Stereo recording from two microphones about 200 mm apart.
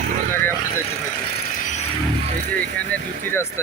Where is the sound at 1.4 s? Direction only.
40° left (ahead or behind).